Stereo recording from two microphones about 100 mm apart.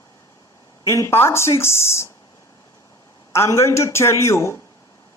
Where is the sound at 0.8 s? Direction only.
30° left (ahead or behind).